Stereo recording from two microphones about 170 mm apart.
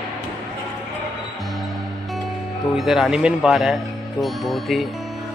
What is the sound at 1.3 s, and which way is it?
Music, centre (ahead or behind).